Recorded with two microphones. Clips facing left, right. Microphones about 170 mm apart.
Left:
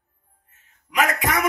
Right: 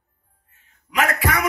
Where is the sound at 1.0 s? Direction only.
15° left (ahead or behind).